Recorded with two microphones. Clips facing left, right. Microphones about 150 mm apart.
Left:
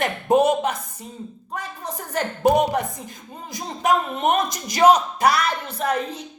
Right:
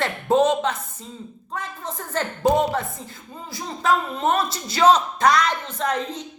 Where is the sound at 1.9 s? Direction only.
15° left (ahead or behind).